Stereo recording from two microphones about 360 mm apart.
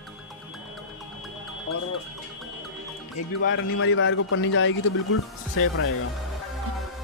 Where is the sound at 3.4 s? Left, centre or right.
Left.